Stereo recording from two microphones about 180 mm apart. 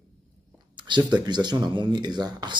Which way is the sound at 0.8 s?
25° right (ahead or behind).